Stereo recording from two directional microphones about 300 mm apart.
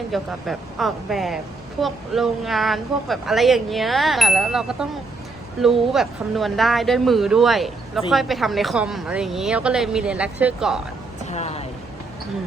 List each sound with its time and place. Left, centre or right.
0.1 s a woman's voice: centre
11.3 s speech: left